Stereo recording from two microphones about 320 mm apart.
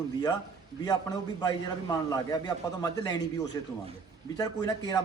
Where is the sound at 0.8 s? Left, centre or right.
Centre.